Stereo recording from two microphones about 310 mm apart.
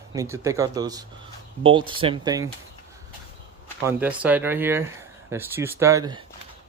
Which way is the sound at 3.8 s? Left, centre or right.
Centre.